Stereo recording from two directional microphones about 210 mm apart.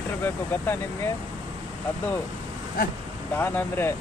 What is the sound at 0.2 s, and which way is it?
Speech, 10° left (ahead or behind).